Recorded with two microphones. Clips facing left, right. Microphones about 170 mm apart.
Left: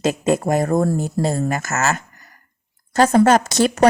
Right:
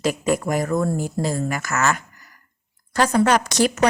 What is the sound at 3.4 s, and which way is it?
Speech, 25° left (ahead or behind).